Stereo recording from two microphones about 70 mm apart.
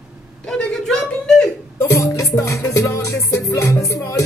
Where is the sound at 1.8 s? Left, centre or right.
Left.